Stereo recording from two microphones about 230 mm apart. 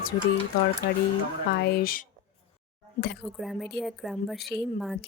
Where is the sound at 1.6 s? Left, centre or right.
Left.